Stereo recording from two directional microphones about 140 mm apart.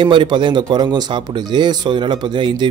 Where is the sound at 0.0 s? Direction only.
35° right (ahead or behind).